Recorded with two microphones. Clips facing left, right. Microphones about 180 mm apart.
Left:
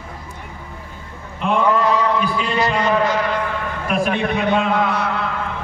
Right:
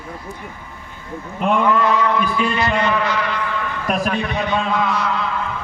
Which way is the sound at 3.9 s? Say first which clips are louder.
Left 1 dB; 40° right (ahead or behind).